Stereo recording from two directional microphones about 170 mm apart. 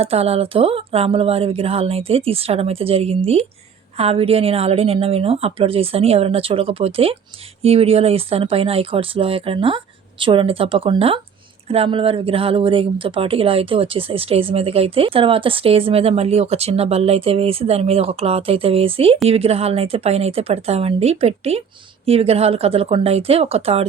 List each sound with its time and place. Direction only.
0.0 s speech: 35° right (ahead or behind)